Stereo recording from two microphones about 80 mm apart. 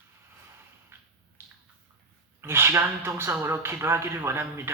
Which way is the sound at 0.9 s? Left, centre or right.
Right.